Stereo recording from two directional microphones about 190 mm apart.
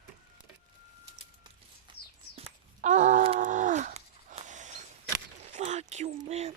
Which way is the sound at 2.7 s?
40° right (ahead or behind).